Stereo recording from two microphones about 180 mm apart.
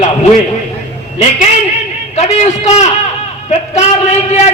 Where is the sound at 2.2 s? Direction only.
40° left (ahead or behind).